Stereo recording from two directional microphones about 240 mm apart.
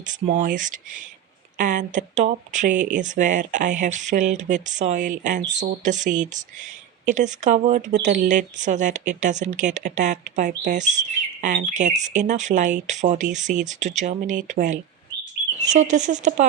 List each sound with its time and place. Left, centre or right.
0.0 s speech: right